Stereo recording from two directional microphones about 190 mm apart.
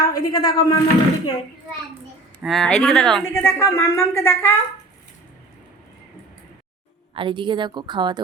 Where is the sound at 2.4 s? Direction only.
Centre (ahead or behind).